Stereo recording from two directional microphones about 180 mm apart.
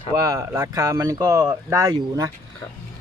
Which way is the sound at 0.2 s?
15° right (ahead or behind).